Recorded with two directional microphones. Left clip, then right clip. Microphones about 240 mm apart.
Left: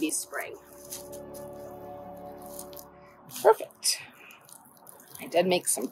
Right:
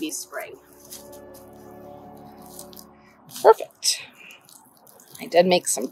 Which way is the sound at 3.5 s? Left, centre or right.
Right.